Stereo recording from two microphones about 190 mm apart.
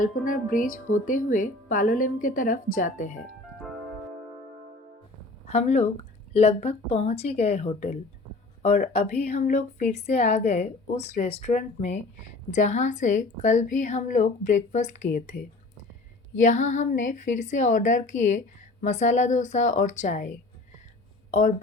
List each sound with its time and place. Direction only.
0.0 s speech: 45° left (ahead or behind)
5.5 s a woman's voice: 35° left (ahead or behind)
16.3 s a woman's voice: 40° left (ahead or behind)
21.2 s a sound: 40° left (ahead or behind)